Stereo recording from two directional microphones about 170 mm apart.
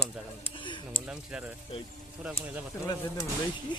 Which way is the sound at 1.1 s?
5° right (ahead or behind).